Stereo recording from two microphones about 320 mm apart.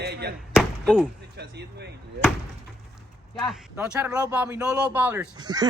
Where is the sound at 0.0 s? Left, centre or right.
Right.